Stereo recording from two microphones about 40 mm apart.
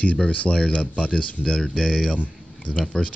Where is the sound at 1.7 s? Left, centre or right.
Centre.